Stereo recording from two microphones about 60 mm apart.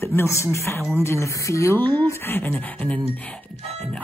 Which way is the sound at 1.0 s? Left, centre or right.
Left.